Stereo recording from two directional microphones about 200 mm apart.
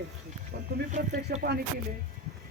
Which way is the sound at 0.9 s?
35° right (ahead or behind).